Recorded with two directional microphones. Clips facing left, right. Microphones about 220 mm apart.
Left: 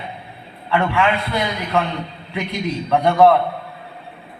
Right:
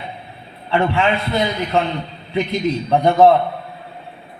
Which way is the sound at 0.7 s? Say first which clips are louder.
Right 1 dB; 25° right (ahead or behind).